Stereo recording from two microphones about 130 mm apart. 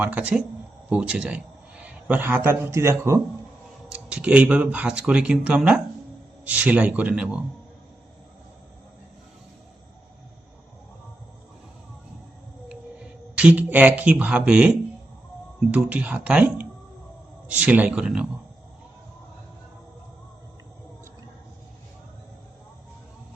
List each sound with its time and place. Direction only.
0.0 s speech: 10° right (ahead or behind)
3.8 s speech: 10° right (ahead or behind)
13.3 s speech: 10° right (ahead or behind)
15.7 s speech: 10° right (ahead or behind)